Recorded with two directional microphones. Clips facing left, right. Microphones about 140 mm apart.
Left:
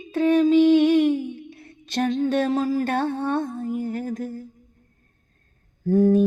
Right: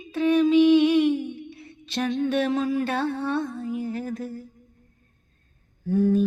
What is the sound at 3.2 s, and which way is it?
Lullaby, 45° left (ahead or behind).